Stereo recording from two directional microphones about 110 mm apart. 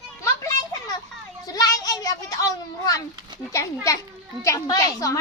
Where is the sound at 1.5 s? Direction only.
35° left (ahead or behind).